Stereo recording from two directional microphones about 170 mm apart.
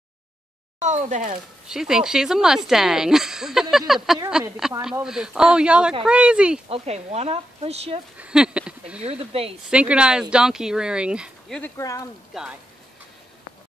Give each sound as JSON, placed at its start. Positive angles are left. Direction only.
{"t": 0.7, "sound": "speech", "side_deg": -45}
{"t": 1.7, "sound": "speech", "side_deg": -5}
{"t": 6.7, "sound": "speech", "side_deg": -40}
{"t": 8.2, "sound": "speech", "side_deg": -5}
{"t": 9.0, "sound": "speech", "side_deg": -35}
{"t": 9.7, "sound": "speech", "side_deg": -5}
{"t": 11.7, "sound": "speech", "side_deg": 20}
{"t": 12.3, "sound": "speech", "side_deg": 0}